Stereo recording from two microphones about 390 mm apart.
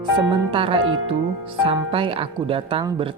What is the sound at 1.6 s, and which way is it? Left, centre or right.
Speech, centre.